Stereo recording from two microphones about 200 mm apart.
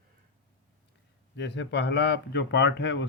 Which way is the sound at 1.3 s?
60° left (ahead or behind).